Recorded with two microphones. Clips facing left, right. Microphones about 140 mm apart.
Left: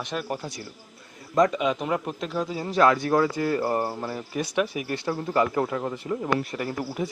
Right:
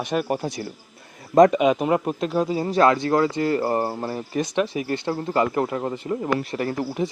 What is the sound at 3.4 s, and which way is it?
Cricket, 90° right.